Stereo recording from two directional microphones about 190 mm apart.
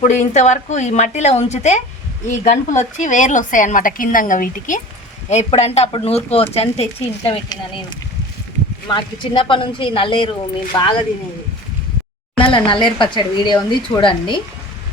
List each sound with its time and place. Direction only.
0.0 s a woman's voice: 40° left (ahead or behind)
12.4 s speech: 25° left (ahead or behind)